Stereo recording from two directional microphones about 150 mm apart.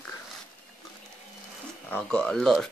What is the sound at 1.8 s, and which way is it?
Speech, 10° left (ahead or behind).